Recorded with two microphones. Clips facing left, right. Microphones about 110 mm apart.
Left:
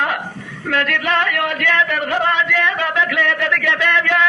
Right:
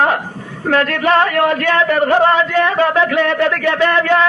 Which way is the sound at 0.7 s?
35° right (ahead or behind).